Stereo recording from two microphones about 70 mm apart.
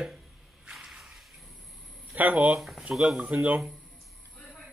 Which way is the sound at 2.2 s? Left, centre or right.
Right.